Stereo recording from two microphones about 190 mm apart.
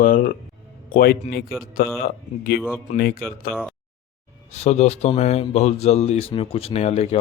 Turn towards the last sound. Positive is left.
turn(degrees=35)  # may be behind; listen again after turning